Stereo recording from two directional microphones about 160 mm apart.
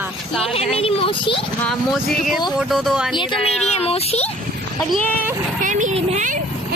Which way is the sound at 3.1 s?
30° left (ahead or behind).